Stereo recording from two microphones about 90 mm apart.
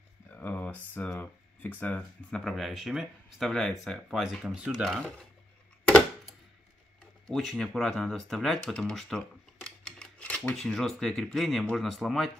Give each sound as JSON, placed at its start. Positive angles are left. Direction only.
{"t": 0.3, "sound": "a sound", "side_deg": 20}
{"t": 1.2, "sound": "speech", "side_deg": 20}
{"t": 2.4, "sound": "speech", "side_deg": 0}
{"t": 7.2, "sound": "speech", "side_deg": 5}